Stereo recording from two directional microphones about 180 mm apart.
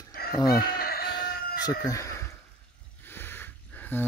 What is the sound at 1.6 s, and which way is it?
Speech, 20° left (ahead or behind).